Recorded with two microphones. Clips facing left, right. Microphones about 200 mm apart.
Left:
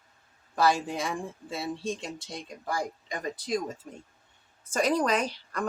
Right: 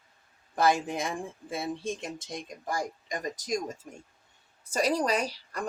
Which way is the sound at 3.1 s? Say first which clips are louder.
Left 1 dB; 45° right (ahead or behind).